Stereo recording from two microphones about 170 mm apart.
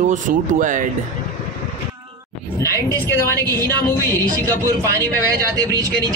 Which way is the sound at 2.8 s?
15° left (ahead or behind).